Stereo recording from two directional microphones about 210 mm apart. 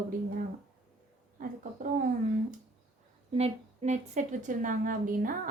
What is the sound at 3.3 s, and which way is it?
A woman's voice, 30° right (ahead or behind).